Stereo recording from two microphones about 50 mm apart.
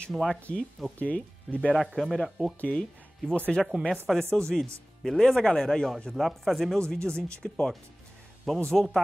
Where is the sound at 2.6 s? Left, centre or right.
Left.